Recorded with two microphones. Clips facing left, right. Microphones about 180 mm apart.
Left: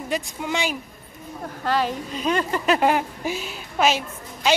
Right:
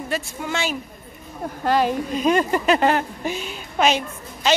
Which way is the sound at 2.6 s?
5° left (ahead or behind).